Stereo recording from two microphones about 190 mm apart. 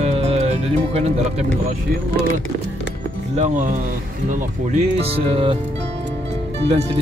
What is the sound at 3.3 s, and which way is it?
Speech, 40° right (ahead or behind).